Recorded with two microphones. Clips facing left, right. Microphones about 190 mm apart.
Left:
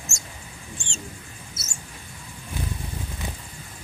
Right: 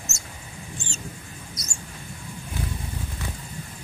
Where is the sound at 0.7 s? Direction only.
5° right (ahead or behind).